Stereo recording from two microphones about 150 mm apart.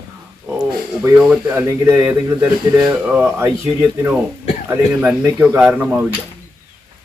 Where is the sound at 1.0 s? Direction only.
15° right (ahead or behind).